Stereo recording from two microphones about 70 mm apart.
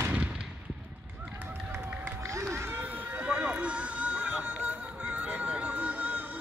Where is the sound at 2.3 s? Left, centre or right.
Right.